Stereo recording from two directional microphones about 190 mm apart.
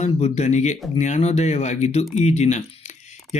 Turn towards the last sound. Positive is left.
turn(degrees=35)  # may be behind; listen again after turning